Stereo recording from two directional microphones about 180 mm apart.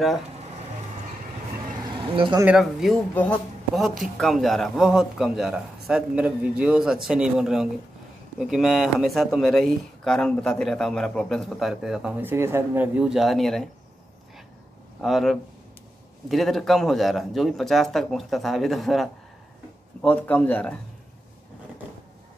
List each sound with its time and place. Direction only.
1.9 s speech: 25° right (ahead or behind)
2.4 s speech: centre (ahead or behind)
15.0 s speech: centre (ahead or behind)